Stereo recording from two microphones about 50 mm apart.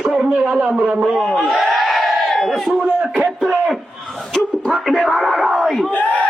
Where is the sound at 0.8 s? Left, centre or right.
Right.